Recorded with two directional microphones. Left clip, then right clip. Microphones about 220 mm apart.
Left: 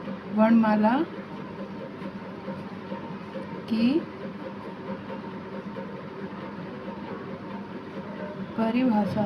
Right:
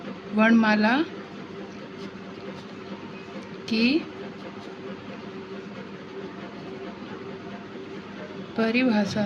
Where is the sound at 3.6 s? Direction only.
55° right (ahead or behind).